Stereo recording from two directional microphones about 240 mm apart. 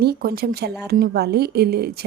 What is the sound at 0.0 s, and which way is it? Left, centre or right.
A woman's voice, right.